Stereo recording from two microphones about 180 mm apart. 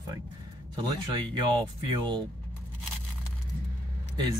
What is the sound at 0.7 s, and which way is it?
Speech, 25° right (ahead or behind).